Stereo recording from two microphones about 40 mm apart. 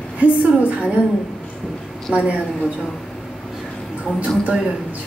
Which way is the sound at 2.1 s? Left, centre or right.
Right.